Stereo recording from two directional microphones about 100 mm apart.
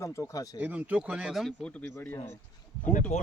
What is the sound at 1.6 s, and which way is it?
Speech, 10° left (ahead or behind).